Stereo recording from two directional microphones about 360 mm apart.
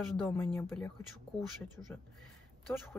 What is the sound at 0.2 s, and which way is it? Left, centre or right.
Speech, centre.